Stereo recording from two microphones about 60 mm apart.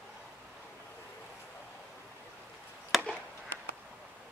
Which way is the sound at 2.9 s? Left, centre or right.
Centre.